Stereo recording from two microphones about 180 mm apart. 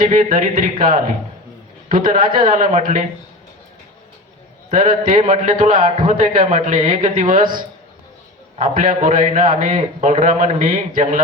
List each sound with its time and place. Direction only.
0.0 s a man's voice: 50° right (ahead or behind)
4.7 s a man's voice: 50° right (ahead or behind)